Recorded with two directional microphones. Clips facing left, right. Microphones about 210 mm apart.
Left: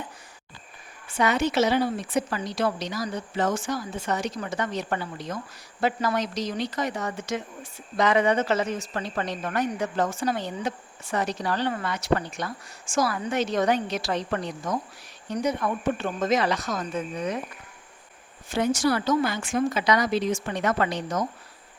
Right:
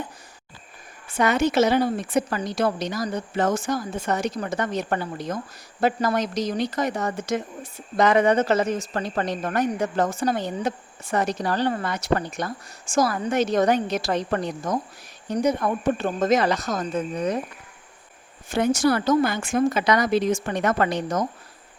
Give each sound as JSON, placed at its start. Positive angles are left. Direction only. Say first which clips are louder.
{"t": 1.1, "sound": "a woman's voice", "louder": "right 3 dB", "side_deg": -45}
{"t": 18.4, "sound": "a woman's voice", "louder": "right 3 dB", "side_deg": -50}